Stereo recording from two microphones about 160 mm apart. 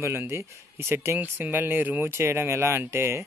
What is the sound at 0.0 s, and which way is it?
Speech, 15° right (ahead or behind).